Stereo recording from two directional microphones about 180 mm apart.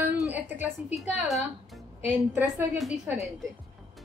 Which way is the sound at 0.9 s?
Centre (ahead or behind).